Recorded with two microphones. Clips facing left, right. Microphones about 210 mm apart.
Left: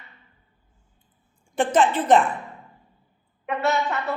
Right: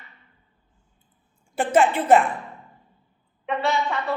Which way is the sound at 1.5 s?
10° right (ahead or behind).